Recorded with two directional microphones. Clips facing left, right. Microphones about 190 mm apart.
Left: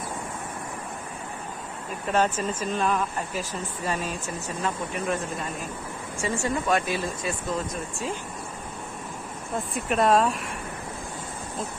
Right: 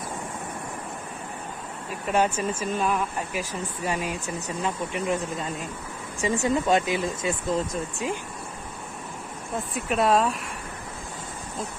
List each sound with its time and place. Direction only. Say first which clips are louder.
2.1 s speech: right 1 dB; 10° right (ahead or behind)
9.7 s speech: left 1 dB; centre (ahead or behind)